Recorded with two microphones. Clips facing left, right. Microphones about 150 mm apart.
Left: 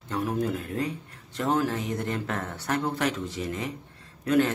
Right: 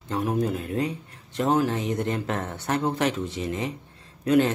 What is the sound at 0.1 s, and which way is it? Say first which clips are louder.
Speech: right 2 dB; 15° right (ahead or behind).